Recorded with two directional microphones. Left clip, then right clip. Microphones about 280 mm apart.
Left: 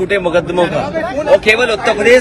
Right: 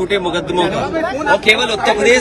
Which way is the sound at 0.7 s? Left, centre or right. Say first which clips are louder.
Left 1 dB; right.